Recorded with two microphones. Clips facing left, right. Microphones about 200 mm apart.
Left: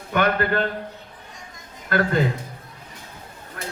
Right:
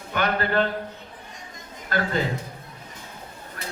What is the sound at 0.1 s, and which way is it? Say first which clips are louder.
Speech: left 3 dB; 50° left (ahead or behind).